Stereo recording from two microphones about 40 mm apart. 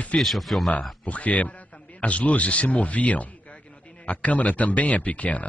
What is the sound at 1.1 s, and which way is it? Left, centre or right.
A man's voice, left.